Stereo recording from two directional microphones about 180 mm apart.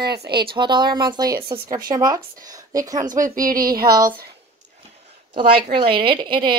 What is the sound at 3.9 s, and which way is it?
Speech, 20° right (ahead or behind).